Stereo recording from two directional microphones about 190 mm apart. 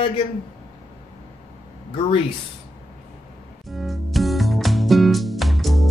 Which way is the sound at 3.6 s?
Centre (ahead or behind).